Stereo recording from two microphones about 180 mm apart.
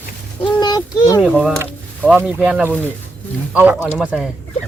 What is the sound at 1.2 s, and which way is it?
Speech, 5° right (ahead or behind).